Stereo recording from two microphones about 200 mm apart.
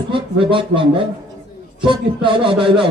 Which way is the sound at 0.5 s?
25° right (ahead or behind).